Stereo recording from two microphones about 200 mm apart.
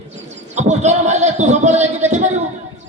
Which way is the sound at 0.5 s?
35° right (ahead or behind).